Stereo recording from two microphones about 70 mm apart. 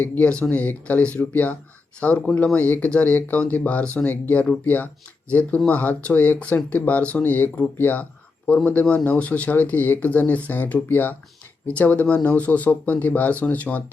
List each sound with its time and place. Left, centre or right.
0.0 s speech: left